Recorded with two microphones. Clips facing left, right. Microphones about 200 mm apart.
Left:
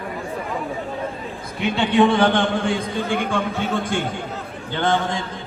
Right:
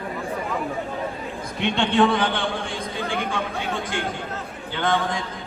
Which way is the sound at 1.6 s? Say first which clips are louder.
Left 2 dB; 5° left (ahead or behind).